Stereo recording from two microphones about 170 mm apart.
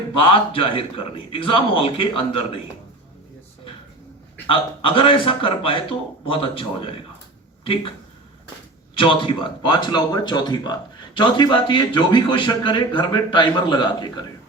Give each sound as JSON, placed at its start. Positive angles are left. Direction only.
{"t": 0.2, "sound": "a man's voice", "side_deg": 30}
{"t": 4.4, "sound": "a man's voice", "side_deg": 30}
{"t": 9.0, "sound": "speech", "side_deg": 30}